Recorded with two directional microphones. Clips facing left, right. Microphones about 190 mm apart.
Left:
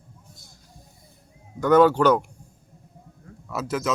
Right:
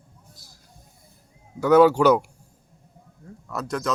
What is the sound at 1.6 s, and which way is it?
Speech, 5° right (ahead or behind).